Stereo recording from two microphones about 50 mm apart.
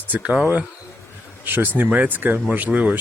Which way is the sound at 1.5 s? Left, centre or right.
Right.